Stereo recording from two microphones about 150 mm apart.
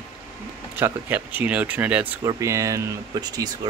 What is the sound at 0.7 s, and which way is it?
Speech, 15° right (ahead or behind).